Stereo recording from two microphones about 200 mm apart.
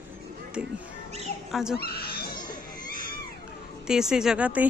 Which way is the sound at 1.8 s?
50° left (ahead or behind).